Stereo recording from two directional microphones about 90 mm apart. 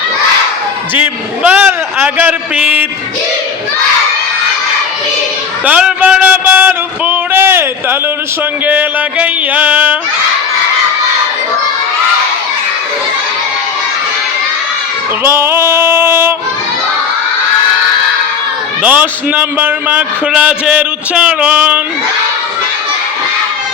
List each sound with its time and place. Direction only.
0.9 s a man's voice: 20° right (ahead or behind)
5.6 s a man's voice: 15° right (ahead or behind)
15.2 s music: 25° right (ahead or behind)
18.8 s a man's voice: 15° right (ahead or behind)